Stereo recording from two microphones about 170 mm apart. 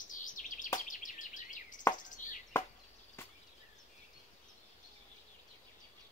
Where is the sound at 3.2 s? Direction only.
15° left (ahead or behind).